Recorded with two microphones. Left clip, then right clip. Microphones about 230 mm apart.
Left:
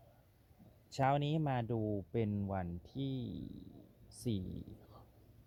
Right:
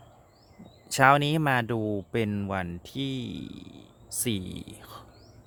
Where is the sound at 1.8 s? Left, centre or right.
Right.